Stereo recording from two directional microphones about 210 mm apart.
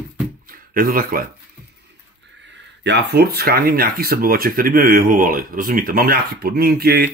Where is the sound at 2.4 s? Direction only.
55° right (ahead or behind).